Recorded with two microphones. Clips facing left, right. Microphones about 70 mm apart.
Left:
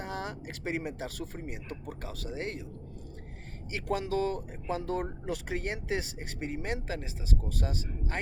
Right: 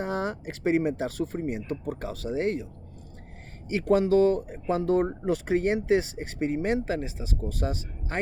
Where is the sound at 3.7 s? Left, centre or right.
Right.